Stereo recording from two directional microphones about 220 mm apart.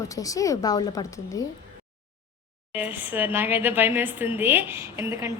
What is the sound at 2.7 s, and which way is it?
A woman's voice, 5° right (ahead or behind).